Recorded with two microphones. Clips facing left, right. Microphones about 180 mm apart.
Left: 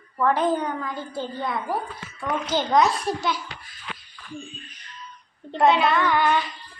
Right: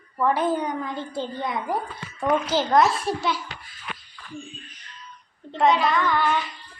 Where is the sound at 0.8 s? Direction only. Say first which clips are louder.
Right 1 dB; 25° right (ahead or behind).